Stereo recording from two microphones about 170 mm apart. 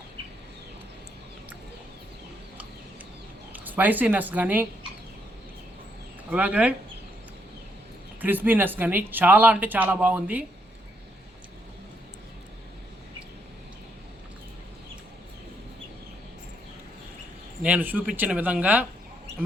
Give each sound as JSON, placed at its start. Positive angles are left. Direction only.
{"t": 3.5, "sound": "speech", "side_deg": -10}
{"t": 6.3, "sound": "speech", "side_deg": -5}
{"t": 8.2, "sound": "speech", "side_deg": -10}
{"t": 17.6, "sound": "speech", "side_deg": -10}